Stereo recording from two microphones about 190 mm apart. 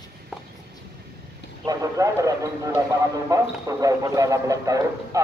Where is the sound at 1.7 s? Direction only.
15° right (ahead or behind).